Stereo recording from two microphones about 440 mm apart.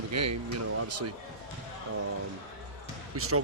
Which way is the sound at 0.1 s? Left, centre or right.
Right.